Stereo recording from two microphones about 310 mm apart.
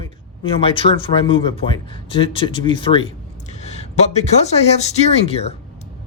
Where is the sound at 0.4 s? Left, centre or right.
Centre.